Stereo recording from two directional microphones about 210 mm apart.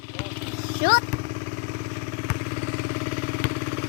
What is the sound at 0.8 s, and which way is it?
Speech, 45° left (ahead or behind).